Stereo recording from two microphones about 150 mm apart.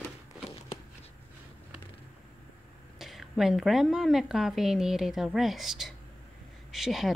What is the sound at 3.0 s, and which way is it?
Speech, centre (ahead or behind).